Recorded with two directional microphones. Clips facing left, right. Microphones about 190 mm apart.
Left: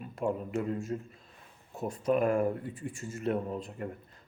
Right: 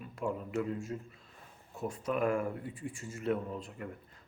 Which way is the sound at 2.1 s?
35° left (ahead or behind).